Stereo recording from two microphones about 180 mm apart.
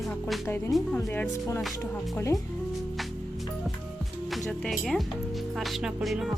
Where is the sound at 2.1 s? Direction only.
15° left (ahead or behind).